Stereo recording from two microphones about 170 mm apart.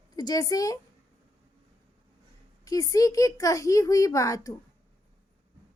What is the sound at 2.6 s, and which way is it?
A woman's voice, 20° left (ahead or behind).